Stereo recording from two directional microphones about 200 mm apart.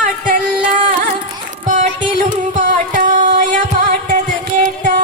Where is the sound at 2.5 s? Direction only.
40° right (ahead or behind).